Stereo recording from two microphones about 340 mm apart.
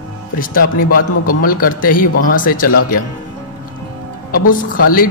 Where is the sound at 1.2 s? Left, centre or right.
Left.